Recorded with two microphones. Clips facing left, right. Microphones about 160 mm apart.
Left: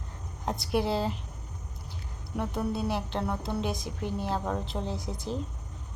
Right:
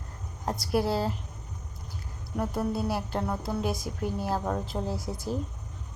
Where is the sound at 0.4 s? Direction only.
Centre (ahead or behind).